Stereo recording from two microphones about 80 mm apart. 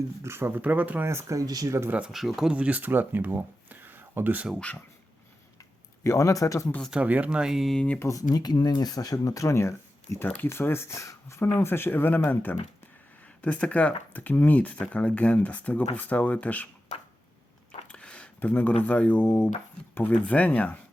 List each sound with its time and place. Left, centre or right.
0.2 s speech: right
1.0 s speech: right
2.1 s speech: centre
2.5 s speech: centre
6.0 s speech: left
6.9 s speech: centre
8.1 s speech: left
10.2 s speech: left
17.8 s a sound: centre
18.3 s speech: left